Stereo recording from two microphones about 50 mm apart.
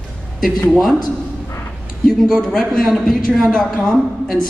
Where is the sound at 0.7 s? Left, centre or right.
Centre.